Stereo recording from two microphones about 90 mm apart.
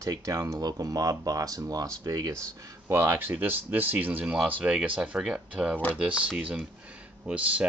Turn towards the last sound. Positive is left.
turn(degrees=-15)  # may be behind; listen again after turning